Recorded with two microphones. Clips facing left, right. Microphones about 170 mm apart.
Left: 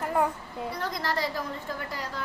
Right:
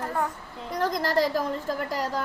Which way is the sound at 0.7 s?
45° right (ahead or behind).